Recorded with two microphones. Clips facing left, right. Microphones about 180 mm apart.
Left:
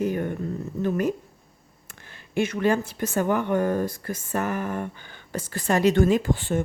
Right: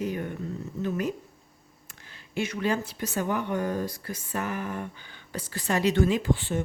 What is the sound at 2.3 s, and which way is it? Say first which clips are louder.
Speech: left 5 dB; 50° left (ahead or behind).